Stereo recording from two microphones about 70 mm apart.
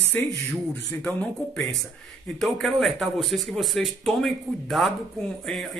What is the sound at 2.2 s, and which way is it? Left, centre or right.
Speech, centre.